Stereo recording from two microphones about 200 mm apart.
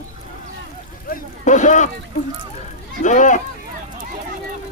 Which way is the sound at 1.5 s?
40° left (ahead or behind).